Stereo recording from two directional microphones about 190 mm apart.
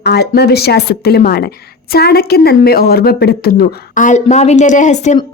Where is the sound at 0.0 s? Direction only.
60° left (ahead or behind).